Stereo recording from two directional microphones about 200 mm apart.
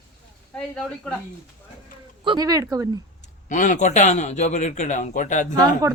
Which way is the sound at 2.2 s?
20° right (ahead or behind).